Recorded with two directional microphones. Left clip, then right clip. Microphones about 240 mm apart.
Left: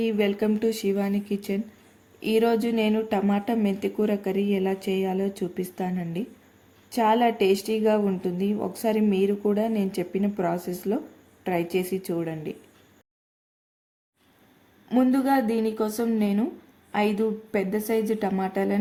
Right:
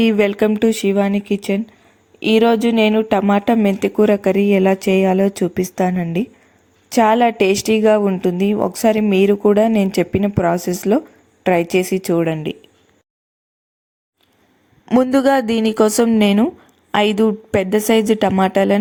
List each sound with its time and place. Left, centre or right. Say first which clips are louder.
0.0 s a woman's voice: right 10 dB; right
14.8 s a woman's voice: right 9 dB; right